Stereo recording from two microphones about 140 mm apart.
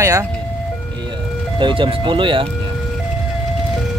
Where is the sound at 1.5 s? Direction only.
35° right (ahead or behind).